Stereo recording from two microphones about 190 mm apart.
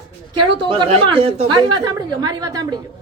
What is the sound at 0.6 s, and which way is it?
A woman's voice, 25° right (ahead or behind).